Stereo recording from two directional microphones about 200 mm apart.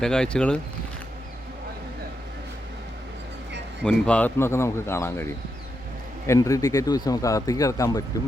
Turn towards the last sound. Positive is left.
turn(degrees=15)  # may be behind; listen again after turning